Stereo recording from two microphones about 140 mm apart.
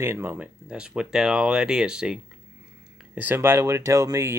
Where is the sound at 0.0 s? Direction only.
15° right (ahead or behind).